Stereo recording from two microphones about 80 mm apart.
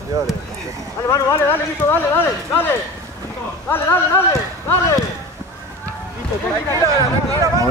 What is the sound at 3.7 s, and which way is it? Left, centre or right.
Speech, left.